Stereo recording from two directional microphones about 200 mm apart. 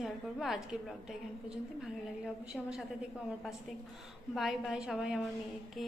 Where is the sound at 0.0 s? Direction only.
Centre (ahead or behind).